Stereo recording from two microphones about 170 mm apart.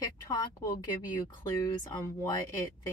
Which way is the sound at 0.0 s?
20° left (ahead or behind).